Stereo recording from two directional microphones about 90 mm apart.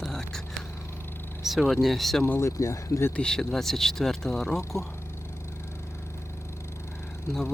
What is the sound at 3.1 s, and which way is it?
Speech, 10° left (ahead or behind).